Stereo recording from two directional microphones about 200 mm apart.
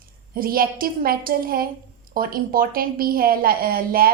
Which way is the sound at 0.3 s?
45° right (ahead or behind).